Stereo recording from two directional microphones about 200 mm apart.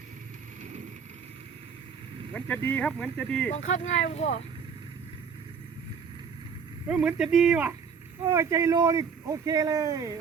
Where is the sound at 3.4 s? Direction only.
40° left (ahead or behind).